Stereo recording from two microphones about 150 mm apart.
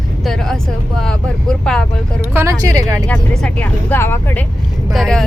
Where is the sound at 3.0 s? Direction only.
5° left (ahead or behind).